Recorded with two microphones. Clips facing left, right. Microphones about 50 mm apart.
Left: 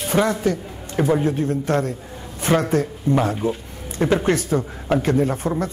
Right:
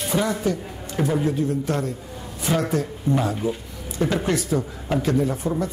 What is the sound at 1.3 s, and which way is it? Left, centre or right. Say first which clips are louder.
Speech: left 3 dB; left.